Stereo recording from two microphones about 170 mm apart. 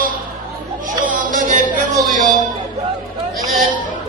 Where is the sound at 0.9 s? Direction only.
50° right (ahead or behind).